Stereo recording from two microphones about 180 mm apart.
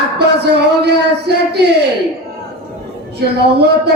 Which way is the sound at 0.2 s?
65° right (ahead or behind).